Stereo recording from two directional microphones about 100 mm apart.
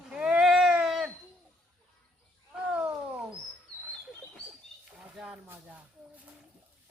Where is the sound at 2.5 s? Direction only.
10° right (ahead or behind).